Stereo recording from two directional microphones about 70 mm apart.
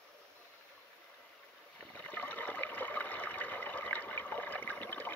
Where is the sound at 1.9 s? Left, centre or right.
Left.